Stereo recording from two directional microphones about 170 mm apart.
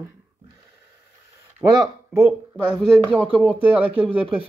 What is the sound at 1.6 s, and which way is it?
Speech, 15° right (ahead or behind).